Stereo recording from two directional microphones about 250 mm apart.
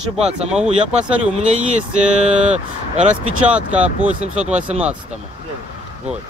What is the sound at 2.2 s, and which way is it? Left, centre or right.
Speech, right.